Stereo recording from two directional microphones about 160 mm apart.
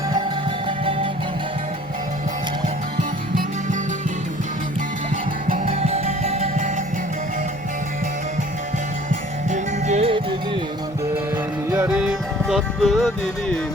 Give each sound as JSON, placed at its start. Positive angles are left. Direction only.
{"t": 3.0, "sound": "music", "side_deg": -55}
{"t": 5.6, "sound": "music", "side_deg": -40}
{"t": 9.5, "sound": "music", "side_deg": -45}
{"t": 11.9, "sound": "music", "side_deg": -5}